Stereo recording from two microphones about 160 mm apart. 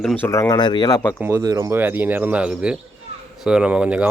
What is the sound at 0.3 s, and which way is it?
Speech, 20° left (ahead or behind).